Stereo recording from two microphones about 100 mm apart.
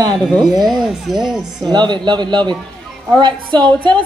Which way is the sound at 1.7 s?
45° right (ahead or behind).